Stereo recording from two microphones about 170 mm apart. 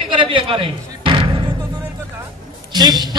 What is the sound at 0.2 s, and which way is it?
Slam, 30° right (ahead or behind).